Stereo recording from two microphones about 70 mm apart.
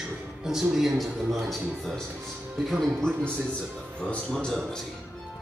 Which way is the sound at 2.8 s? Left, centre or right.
Centre.